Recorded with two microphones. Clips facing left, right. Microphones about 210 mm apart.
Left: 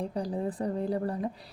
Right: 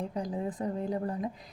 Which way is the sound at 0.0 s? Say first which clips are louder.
Left 2 dB; 35° left (ahead or behind).